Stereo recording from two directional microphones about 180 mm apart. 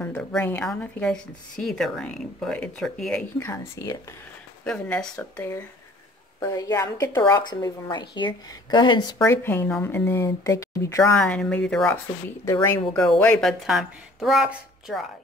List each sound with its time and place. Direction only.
0.0 s a woman's voice: 10° left (ahead or behind)
4.6 s a woman's voice: 5° left (ahead or behind)
11.1 s a woman's voice: 5° left (ahead or behind)
12.6 s a woman's voice: 20° left (ahead or behind)
13.2 s a woman's voice: 5° left (ahead or behind)